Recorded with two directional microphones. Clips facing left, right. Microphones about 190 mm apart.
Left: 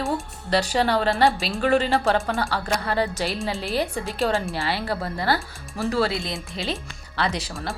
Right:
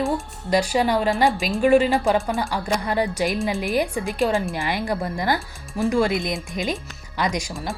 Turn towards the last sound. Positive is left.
turn(degrees=-15)  # may be behind; listen again after turning